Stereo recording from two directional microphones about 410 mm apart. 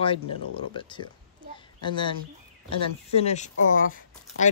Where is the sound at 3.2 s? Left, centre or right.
Centre.